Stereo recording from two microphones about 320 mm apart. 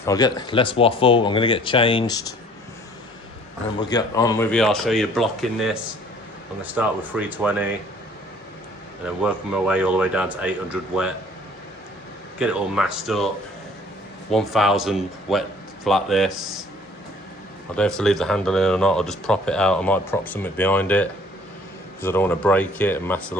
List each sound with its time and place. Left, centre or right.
0.0 s speech: centre
3.8 s speech: centre
9.2 s speech: centre
12.4 s speech: centre
14.3 s speech: centre
17.7 s speech: centre